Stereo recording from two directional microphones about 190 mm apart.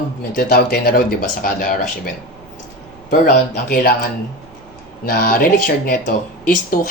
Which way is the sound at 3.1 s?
50° left (ahead or behind).